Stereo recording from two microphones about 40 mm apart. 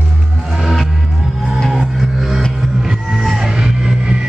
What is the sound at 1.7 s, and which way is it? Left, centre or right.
Music, centre.